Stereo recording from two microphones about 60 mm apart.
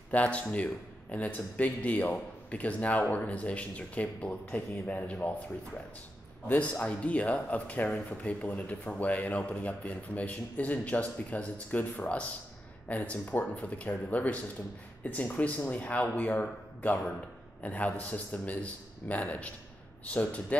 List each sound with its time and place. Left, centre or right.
0.1 s a man's voice: left
6.4 s a man's voice: left